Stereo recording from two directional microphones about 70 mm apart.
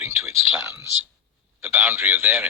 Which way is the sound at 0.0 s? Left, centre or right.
Right.